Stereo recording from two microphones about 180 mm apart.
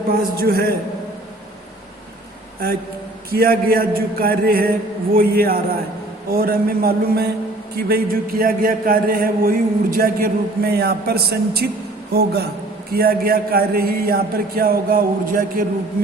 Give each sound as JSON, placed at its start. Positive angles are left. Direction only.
{"t": 0.1, "sound": "a man's voice", "side_deg": -60}
{"t": 3.2, "sound": "a man's voice", "side_deg": -55}